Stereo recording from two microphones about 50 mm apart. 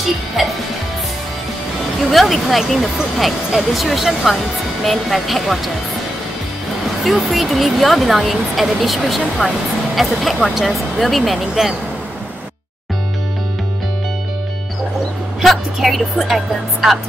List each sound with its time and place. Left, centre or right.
0.4 s speech: centre
2.0 s speech: centre
7.1 s speech: centre
15.4 s speech: centre